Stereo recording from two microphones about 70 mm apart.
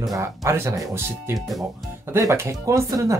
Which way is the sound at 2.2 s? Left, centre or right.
Right.